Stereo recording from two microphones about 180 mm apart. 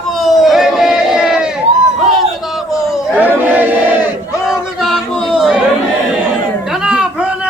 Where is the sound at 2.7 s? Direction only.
Centre (ahead or behind).